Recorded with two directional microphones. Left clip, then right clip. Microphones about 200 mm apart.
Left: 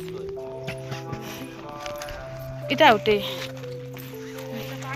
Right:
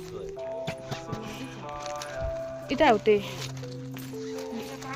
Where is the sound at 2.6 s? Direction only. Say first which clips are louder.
Left 4 dB; centre (ahead or behind).